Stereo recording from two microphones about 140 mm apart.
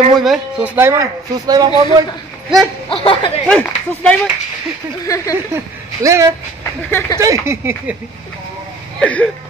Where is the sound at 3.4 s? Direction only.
10° left (ahead or behind).